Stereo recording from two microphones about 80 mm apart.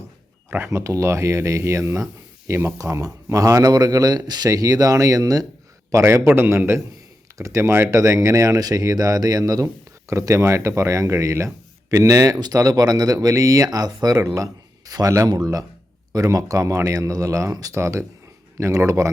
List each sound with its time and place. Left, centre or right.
0.7 s speech: right
3.7 s a man's voice: right